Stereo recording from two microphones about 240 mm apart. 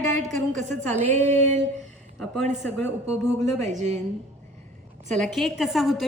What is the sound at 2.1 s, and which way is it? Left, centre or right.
A woman's voice, centre.